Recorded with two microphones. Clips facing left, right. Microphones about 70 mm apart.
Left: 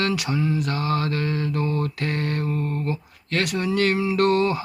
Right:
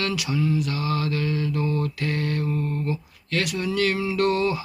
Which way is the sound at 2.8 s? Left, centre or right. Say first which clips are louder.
Left 1 dB; left.